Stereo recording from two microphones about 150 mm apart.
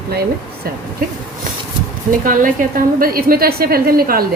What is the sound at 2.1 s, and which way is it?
A woman's voice, 65° right (ahead or behind).